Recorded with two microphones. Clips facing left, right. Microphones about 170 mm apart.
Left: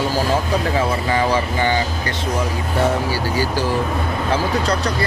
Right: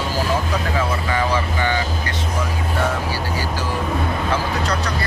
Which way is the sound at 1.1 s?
30° left (ahead or behind).